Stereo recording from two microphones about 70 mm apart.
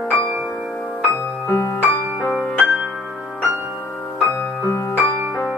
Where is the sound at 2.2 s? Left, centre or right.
Right.